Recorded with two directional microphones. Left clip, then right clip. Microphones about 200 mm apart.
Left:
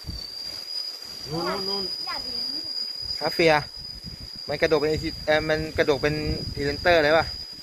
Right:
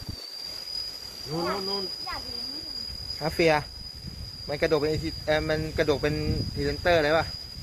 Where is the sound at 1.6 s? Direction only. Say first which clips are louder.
Left 3 dB; centre (ahead or behind).